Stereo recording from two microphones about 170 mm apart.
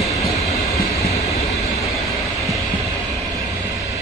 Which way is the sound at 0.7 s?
20° left (ahead or behind).